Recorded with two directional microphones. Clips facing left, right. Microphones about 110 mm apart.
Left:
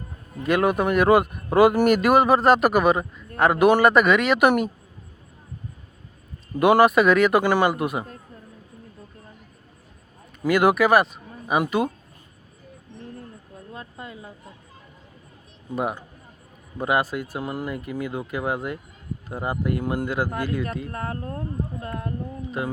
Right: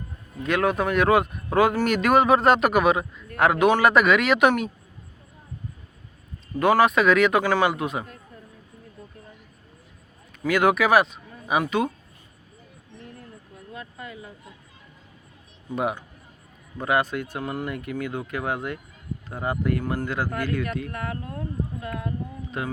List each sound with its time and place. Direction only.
0.4 s speech: 5° left (ahead or behind)
6.6 s speech: 10° left (ahead or behind)
10.4 s speech: 5° left (ahead or behind)
13.7 s speech: 30° left (ahead or behind)
15.7 s speech: centre (ahead or behind)
20.9 s speech: 35° left (ahead or behind)